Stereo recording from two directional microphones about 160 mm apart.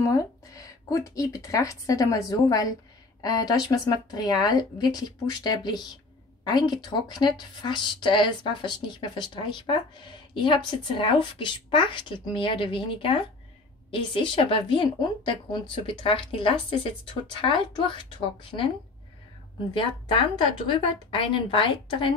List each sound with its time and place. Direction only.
0.1 s a woman's voice: 20° left (ahead or behind)
19.7 s a woman's voice: 30° left (ahead or behind)